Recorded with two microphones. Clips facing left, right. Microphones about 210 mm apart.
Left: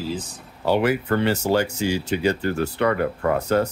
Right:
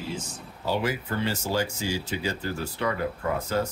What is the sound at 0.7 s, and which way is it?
Speech, 65° left (ahead or behind).